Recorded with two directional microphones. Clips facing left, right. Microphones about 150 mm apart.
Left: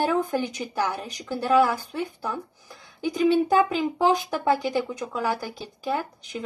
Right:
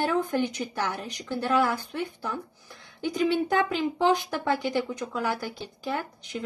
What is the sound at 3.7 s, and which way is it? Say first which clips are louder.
Speech: left 2 dB; 40° left (ahead or behind).